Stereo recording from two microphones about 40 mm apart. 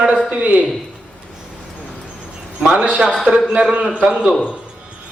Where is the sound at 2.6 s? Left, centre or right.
Right.